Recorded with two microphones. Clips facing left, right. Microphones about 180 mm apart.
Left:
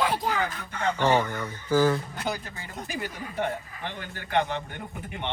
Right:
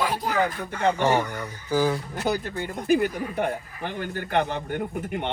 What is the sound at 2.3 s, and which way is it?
A man's voice, 60° right (ahead or behind).